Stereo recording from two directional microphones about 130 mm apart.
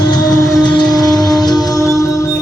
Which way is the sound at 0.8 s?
30° left (ahead or behind).